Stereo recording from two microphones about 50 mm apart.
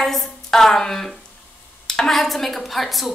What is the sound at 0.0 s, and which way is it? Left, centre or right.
A woman's voice, centre.